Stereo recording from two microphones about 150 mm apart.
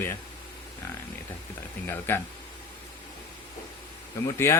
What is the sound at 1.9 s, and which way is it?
Speech, 15° left (ahead or behind).